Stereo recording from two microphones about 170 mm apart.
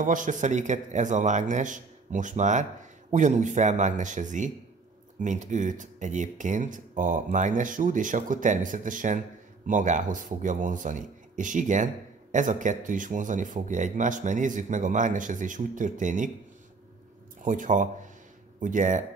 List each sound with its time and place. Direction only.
0.0 s speech: 50° right (ahead or behind)
17.4 s speech: 50° right (ahead or behind)